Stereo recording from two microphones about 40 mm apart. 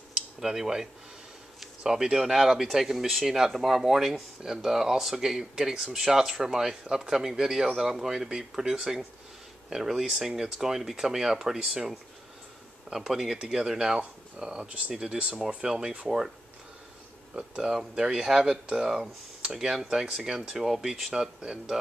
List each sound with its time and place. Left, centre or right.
0.4 s speech: centre
13.3 s speech: centre
15.4 s speech: centre
17.4 s speech: centre